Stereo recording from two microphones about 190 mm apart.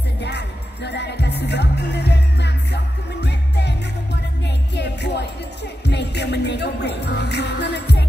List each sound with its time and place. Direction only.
0.2 s music: 65° left (ahead or behind)